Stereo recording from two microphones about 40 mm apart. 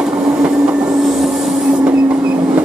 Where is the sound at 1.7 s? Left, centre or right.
Right.